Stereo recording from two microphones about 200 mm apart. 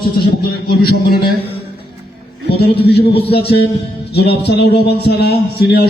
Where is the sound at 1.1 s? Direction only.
50° left (ahead or behind).